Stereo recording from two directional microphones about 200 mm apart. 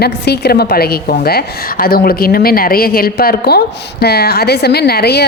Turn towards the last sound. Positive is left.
turn(degrees=55)  # may be behind; listen again after turning